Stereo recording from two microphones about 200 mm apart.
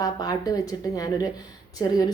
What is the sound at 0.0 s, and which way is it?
Speech, 20° left (ahead or behind).